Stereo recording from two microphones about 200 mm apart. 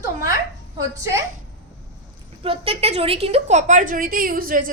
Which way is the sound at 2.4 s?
30° right (ahead or behind).